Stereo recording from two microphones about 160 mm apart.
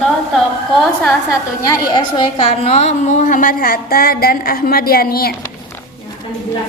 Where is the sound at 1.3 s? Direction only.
20° left (ahead or behind); by 5.3 s 70° left (ahead or behind).